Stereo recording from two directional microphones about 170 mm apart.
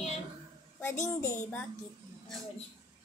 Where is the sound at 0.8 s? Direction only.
15° left (ahead or behind).